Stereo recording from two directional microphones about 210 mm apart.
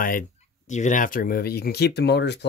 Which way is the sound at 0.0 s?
40° left (ahead or behind).